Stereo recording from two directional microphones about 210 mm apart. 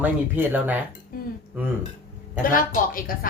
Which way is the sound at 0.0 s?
10° right (ahead or behind).